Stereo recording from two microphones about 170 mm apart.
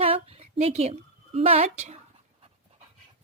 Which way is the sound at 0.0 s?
35° right (ahead or behind).